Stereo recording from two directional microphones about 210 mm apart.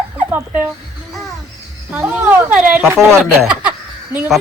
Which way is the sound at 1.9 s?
5° right (ahead or behind).